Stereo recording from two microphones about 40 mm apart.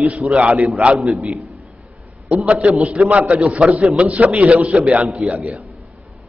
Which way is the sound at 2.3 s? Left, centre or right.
Right.